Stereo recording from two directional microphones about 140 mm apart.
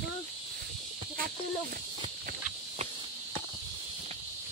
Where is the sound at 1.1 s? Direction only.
90° right.